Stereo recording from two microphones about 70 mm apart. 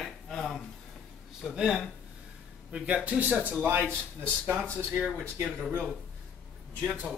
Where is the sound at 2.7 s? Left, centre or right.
Centre.